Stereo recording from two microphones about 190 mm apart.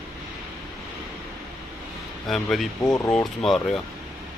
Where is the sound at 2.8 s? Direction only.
15° left (ahead or behind).